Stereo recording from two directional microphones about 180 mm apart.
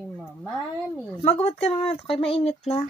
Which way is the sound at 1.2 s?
35° left (ahead or behind).